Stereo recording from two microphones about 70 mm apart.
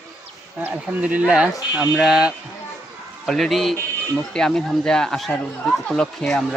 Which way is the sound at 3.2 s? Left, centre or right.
Centre.